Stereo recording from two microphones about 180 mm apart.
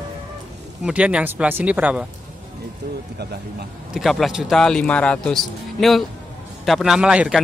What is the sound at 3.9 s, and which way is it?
A man's voice, centre (ahead or behind).